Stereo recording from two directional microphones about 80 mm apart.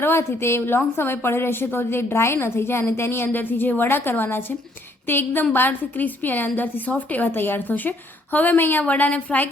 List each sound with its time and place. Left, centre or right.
0.0 s a woman's voice: left